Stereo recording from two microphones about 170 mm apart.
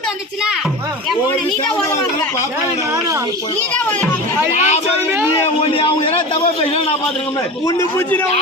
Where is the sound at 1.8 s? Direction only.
15° left (ahead or behind).